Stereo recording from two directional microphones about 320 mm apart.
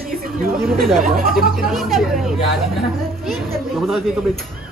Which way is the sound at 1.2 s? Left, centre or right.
Right.